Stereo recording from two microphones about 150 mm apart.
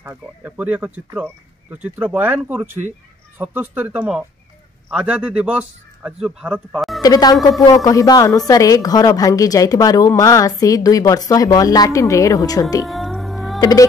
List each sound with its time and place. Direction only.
0.0 s a man's voice: 15° right (ahead or behind)
7.0 s a woman's voice: 25° left (ahead or behind)
12.8 s music: centre (ahead or behind)
13.6 s speech: 25° left (ahead or behind)